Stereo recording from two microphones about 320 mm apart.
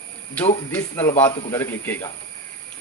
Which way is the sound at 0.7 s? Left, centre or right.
Centre.